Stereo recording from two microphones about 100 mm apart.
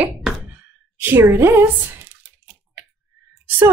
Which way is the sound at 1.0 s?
20° right (ahead or behind).